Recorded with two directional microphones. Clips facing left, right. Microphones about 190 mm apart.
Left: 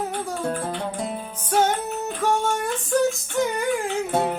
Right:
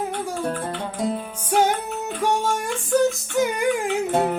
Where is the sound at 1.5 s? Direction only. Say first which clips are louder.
Right 1 dB; 10° right (ahead or behind).